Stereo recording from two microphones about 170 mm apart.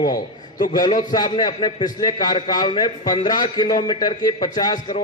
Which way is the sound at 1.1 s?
25° left (ahead or behind).